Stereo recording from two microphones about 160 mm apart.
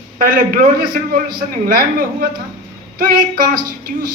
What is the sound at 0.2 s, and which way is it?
A woman's voice, 65° right (ahead or behind).